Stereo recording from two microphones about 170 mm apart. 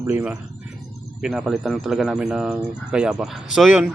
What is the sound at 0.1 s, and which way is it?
Speech, 10° right (ahead or behind).